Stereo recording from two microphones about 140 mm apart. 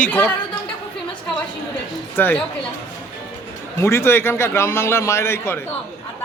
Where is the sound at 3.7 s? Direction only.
20° left (ahead or behind).